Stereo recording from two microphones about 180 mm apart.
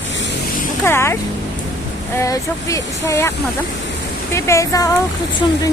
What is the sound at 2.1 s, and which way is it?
Female singing, 20° left (ahead or behind).